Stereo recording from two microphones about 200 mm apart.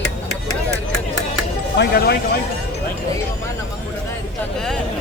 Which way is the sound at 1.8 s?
55° left (ahead or behind).